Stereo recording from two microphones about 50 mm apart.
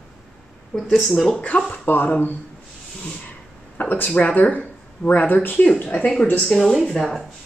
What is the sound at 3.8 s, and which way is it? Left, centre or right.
Speech, left.